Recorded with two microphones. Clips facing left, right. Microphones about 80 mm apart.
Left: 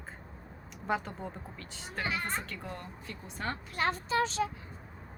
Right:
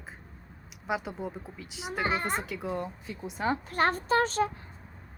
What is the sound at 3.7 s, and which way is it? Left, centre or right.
Speech, right.